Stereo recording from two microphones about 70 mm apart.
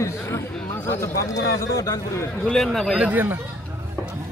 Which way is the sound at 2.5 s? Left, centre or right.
Centre.